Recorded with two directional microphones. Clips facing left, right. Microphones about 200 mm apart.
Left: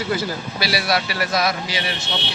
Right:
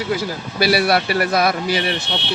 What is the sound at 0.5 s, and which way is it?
Speech, 55° right (ahead or behind).